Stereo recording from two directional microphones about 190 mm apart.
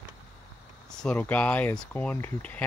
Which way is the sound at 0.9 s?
5° left (ahead or behind).